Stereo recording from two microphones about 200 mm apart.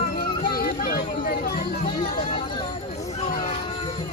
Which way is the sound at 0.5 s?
50° left (ahead or behind).